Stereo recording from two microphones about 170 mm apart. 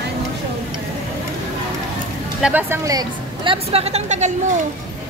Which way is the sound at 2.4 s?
10° right (ahead or behind).